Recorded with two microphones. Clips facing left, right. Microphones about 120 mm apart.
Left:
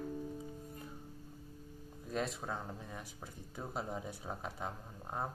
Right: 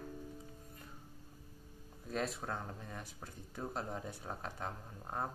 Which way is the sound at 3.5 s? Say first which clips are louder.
Even; 5° left (ahead or behind).